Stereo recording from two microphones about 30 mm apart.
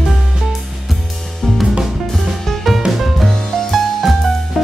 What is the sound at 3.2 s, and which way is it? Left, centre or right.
Music, centre.